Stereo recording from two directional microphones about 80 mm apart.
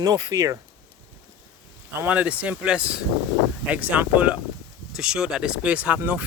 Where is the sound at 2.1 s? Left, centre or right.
Centre.